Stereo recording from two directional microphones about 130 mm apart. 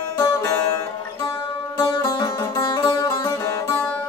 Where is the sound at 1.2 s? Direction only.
40° left (ahead or behind); by 4.1 s 20° left (ahead or behind).